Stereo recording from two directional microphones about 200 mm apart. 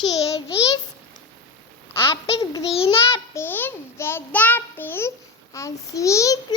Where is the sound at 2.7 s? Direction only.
30° left (ahead or behind).